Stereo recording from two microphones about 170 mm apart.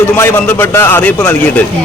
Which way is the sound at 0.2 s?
10° left (ahead or behind).